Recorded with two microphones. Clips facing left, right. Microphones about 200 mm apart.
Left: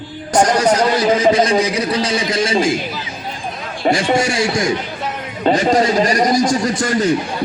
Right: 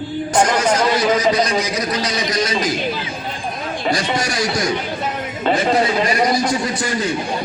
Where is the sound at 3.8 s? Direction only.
40° left (ahead or behind).